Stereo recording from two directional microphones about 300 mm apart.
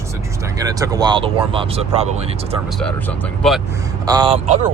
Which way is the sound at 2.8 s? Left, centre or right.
Centre.